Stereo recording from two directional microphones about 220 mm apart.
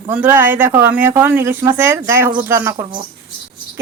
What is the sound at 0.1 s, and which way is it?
Speech, 10° right (ahead or behind).